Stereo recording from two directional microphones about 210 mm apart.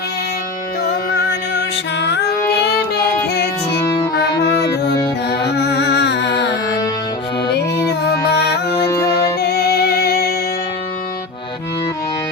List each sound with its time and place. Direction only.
0.9 s music: 50° left (ahead or behind)
3.8 s music: 20° left (ahead or behind)
4.1 s music: 50° left (ahead or behind)
9.4 s music: 50° left (ahead or behind)